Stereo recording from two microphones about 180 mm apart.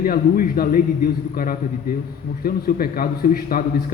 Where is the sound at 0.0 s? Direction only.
55° left (ahead or behind).